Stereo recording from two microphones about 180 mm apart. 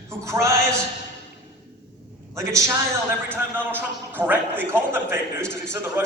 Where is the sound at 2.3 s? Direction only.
15° right (ahead or behind).